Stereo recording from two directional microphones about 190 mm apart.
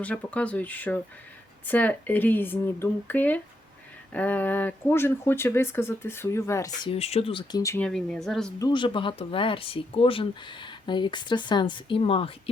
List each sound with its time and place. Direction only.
0.0 s speech: 5° left (ahead or behind)
6.9 s speech: 30° left (ahead or behind)
7.6 s speech: 15° left (ahead or behind)
7.9 s speech: centre (ahead or behind)
8.5 s speech: 20° left (ahead or behind)